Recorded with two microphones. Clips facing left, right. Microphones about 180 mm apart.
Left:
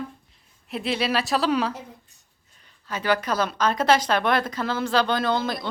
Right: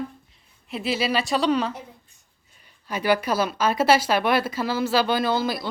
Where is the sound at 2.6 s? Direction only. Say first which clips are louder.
Right 2 dB; 10° right (ahead or behind).